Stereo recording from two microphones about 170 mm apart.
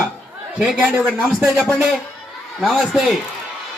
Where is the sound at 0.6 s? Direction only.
10° right (ahead or behind).